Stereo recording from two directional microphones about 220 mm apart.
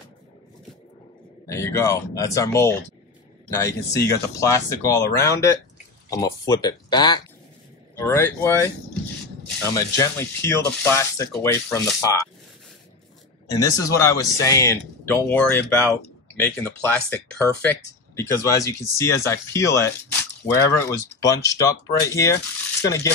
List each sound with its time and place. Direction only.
1.5 s speech: 15° left (ahead or behind)
9.8 s speech: 10° left (ahead or behind)
13.5 s speech: 15° left (ahead or behind)